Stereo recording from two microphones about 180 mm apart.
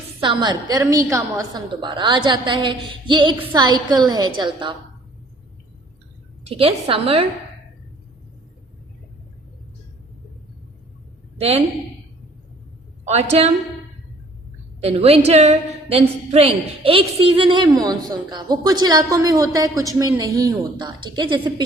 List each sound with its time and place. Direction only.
0.2 s a woman's voice: 25° right (ahead or behind)
6.5 s a woman's voice: 35° right (ahead or behind)
11.3 s a woman's voice: 35° right (ahead or behind)
14.8 s a woman's voice: 35° right (ahead or behind)